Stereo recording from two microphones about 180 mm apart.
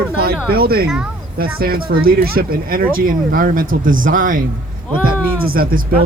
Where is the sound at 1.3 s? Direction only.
55° right (ahead or behind).